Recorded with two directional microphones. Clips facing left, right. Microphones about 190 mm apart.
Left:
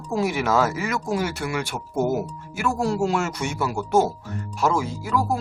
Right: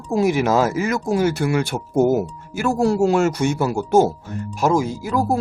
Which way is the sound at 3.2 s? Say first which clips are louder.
Right 7 dB; 30° right (ahead or behind).